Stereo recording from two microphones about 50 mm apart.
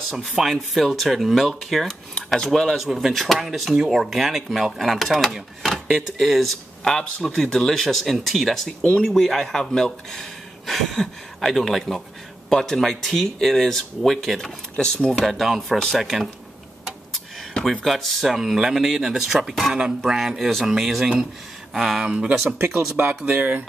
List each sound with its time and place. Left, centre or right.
0.4 s speech: centre
2.8 s speech: centre
14.8 s speech: centre
15.2 s speech: centre
17.8 s speech: centre
20.3 s speech: centre
22.0 s speech: right
22.3 s speech: right
22.9 s speech: right